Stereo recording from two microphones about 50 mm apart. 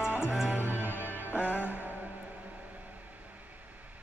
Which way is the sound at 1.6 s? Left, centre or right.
Right.